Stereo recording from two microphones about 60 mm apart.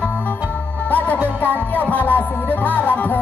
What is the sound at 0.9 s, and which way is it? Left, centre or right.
Music, left.